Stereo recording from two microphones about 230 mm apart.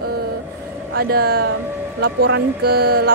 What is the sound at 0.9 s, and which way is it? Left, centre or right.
A woman's voice, right.